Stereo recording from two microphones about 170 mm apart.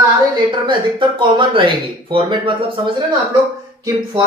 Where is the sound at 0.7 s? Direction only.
30° right (ahead or behind).